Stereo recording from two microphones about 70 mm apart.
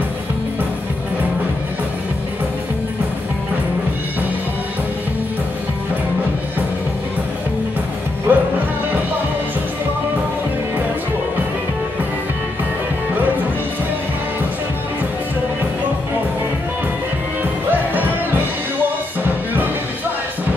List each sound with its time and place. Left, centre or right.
8.3 s music: right
17.4 s music: right
19.2 s music: right